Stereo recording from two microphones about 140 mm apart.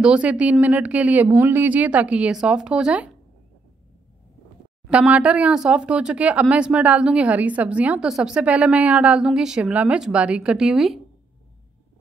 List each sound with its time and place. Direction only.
0.0 s a woman's voice: 10° right (ahead or behind)
4.8 s a woman's voice: 10° right (ahead or behind)